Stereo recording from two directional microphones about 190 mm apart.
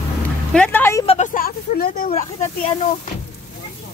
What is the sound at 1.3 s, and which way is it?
Speech, 50° left (ahead or behind).